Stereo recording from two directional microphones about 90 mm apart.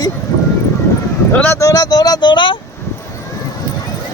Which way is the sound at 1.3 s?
20° left (ahead or behind).